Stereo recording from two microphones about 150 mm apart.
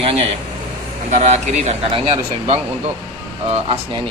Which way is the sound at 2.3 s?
40° right (ahead or behind).